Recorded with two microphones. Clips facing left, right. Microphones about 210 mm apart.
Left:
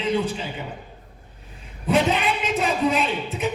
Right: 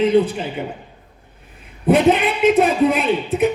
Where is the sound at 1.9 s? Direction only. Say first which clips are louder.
Right 7 dB; 55° right (ahead or behind).